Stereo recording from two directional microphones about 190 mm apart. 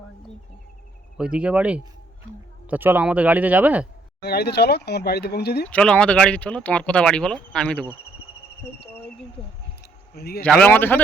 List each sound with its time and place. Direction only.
1.1 s speech: 5° right (ahead or behind)
4.2 s speech: 60° left (ahead or behind)
5.6 s speech: 5° left (ahead or behind)
10.2 s speech: 55° left (ahead or behind)
10.4 s speech: 5° left (ahead or behind)